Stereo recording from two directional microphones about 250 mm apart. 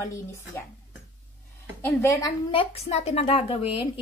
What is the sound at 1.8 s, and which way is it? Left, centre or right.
A woman's voice, centre.